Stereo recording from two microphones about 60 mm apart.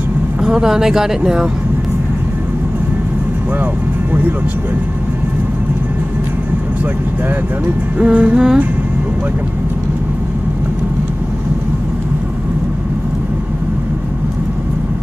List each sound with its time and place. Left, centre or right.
0.4 s speech: centre
8.0 s speech: centre